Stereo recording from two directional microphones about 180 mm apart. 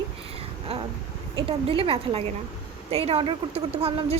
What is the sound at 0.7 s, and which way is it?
A woman's voice, 35° right (ahead or behind).